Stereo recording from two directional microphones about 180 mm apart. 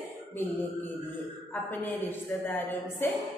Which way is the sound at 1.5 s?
10° left (ahead or behind).